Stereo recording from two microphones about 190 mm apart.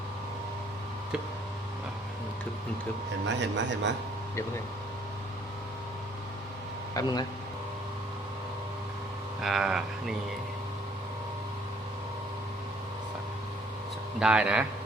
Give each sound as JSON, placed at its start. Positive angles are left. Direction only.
{"t": 3.2, "sound": "speech", "side_deg": -65}
{"t": 6.9, "sound": "speech", "side_deg": 20}
{"t": 9.4, "sound": "speech", "side_deg": 0}
{"t": 14.2, "sound": "speech", "side_deg": -5}